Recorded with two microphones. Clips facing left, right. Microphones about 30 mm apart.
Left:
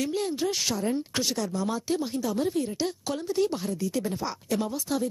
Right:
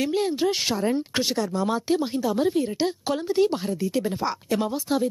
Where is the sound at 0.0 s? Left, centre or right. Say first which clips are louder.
Right 5 dB; right.